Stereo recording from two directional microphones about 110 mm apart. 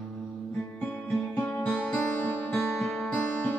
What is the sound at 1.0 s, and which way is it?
Music, centre (ahead or behind).